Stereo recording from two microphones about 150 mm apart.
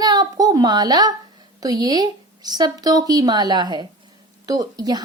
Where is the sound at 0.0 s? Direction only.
25° right (ahead or behind).